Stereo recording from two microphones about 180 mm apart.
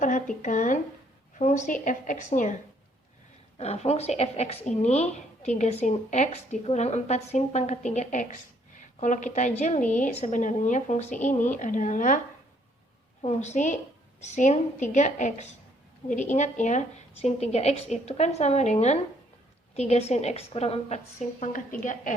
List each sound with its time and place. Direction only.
0.0 s a woman's voice: 45° left (ahead or behind)
3.6 s a woman's voice: 35° left (ahead or behind)
13.2 s a woman's voice: 40° left (ahead or behind)
21.4 s a woman's voice: 45° left (ahead or behind)